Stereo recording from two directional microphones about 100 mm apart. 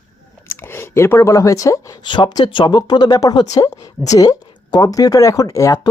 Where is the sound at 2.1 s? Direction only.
50° left (ahead or behind).